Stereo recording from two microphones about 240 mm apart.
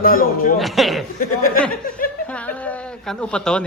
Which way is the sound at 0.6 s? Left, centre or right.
Centre.